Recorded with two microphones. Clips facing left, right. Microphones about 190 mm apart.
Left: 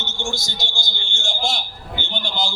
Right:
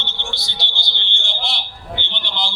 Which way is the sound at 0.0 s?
45° left (ahead or behind).